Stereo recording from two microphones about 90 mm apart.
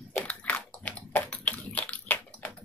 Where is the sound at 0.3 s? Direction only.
15° left (ahead or behind).